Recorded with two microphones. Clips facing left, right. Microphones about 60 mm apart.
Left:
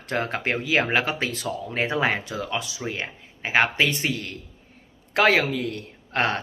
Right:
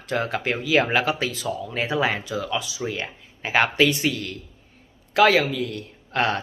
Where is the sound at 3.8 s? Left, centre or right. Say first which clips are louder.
Right 3 dB; left.